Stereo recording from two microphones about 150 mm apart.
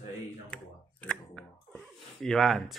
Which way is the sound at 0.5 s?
5° left (ahead or behind).